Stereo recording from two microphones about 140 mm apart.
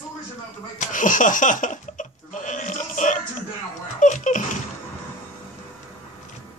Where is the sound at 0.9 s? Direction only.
70° left (ahead or behind).